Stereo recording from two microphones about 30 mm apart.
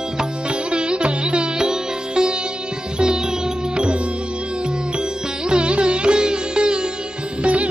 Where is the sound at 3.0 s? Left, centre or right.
Right.